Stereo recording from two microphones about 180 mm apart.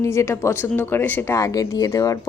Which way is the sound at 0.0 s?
15° left (ahead or behind).